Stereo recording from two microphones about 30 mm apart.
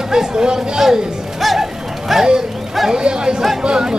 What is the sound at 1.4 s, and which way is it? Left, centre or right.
Music, centre.